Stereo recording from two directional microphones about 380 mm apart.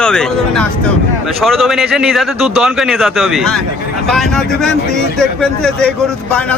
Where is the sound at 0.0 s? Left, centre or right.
Centre.